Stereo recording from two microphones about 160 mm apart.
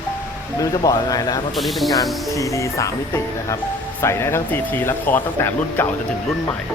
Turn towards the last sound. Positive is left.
turn(degrees=10)  # may be behind; listen again after turning